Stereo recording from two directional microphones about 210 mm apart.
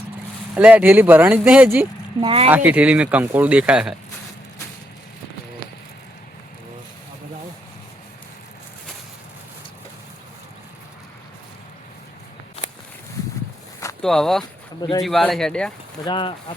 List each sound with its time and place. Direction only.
0.5 s speech: 5° right (ahead or behind)
2.2 s speech: 25° right (ahead or behind)
2.5 s speech: 5° right (ahead or behind)
14.0 s speech: centre (ahead or behind)
14.8 s speech: 20° left (ahead or behind)
15.0 s speech: centre (ahead or behind)
16.0 s speech: 20° left (ahead or behind)